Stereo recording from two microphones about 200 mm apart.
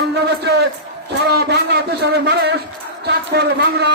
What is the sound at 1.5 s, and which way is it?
Speech, 55° right (ahead or behind).